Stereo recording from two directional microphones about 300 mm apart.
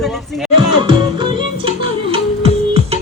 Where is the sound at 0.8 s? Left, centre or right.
Centre.